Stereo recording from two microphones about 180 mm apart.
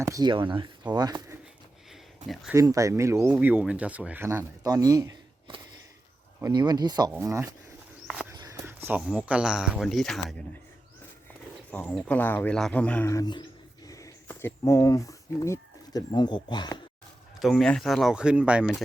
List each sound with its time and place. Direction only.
0.0 s speech: 20° right (ahead or behind)
2.2 s speech: centre (ahead or behind)
2.5 s speech: 20° right (ahead or behind)
8.0 s walk: centre (ahead or behind)
8.4 s speech: 15° right (ahead or behind); by 10.3 s centre (ahead or behind)
11.7 s speech: 5° left (ahead or behind); by 16.8 s 25° left (ahead or behind)
17.4 s speech: centre (ahead or behind)